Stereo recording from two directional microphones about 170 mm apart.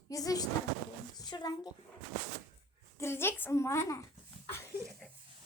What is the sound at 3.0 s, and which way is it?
A woman's voice, 15° left (ahead or behind).